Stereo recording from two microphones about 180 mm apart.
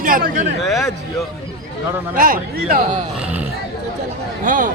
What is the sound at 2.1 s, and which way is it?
Speech, 50° right (ahead or behind).